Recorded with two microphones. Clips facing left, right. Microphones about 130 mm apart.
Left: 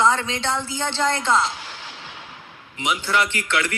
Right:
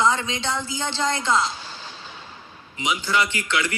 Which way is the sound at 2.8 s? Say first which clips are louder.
Left 1 dB; 60° left (ahead or behind).